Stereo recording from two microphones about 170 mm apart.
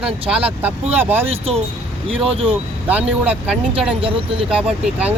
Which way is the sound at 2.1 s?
35° right (ahead or behind).